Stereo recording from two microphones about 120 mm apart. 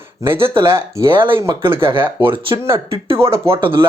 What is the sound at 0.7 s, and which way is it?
Speech, 25° right (ahead or behind).